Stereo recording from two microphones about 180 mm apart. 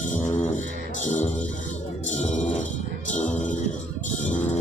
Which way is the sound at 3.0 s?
45° left (ahead or behind).